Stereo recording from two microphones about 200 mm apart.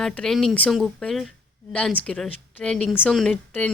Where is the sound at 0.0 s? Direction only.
Centre (ahead or behind).